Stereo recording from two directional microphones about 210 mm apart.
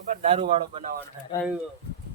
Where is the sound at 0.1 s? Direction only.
35° right (ahead or behind).